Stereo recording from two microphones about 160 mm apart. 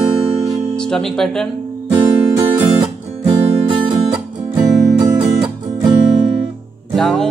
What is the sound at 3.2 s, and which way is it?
Music, 35° right (ahead or behind).